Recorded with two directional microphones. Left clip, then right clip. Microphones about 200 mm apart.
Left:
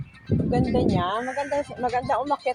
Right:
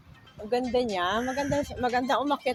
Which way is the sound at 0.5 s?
20° left (ahead or behind).